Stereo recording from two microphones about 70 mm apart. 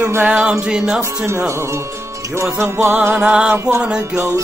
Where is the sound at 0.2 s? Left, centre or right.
Centre.